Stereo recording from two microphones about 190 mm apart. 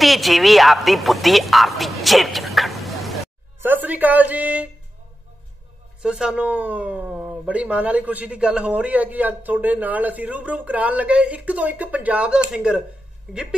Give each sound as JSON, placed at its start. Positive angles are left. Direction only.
{"t": 0.0, "sound": "a woman's voice", "side_deg": 0}
{"t": 3.5, "sound": "a woman's voice", "side_deg": -10}
{"t": 6.0, "sound": "speech", "side_deg": -5}